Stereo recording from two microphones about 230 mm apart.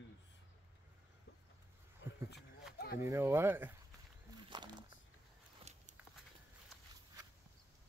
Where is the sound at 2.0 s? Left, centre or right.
Left.